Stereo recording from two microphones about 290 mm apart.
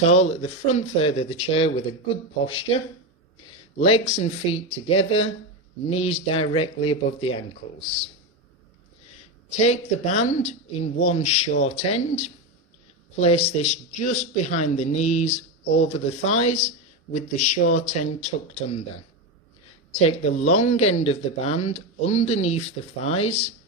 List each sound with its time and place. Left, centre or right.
0.0 s speech: left
3.8 s speech: left
9.6 s speech: left
19.9 s speech: left